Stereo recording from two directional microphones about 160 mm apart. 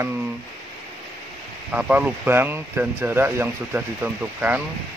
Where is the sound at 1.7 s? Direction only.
10° right (ahead or behind).